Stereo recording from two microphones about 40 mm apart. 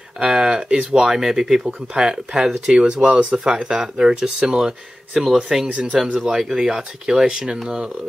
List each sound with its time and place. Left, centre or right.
0.2 s speech: centre
5.1 s speech: centre
5.7 s speech: right
6.2 s speech: centre